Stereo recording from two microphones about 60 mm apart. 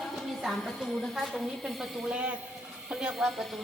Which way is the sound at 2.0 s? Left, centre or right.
Centre.